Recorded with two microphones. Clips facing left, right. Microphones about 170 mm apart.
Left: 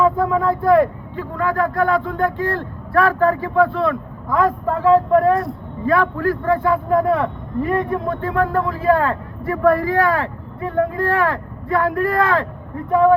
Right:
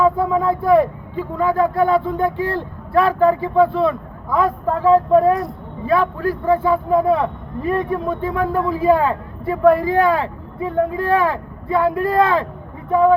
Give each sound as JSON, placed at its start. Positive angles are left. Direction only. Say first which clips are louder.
{"t": 0.0, "sound": "speech", "louder": "even", "side_deg": -15}